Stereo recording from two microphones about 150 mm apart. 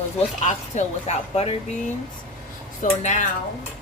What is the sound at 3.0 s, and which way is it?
Speech, 50° left (ahead or behind).